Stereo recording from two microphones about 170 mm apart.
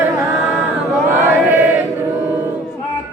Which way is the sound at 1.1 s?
15° right (ahead or behind).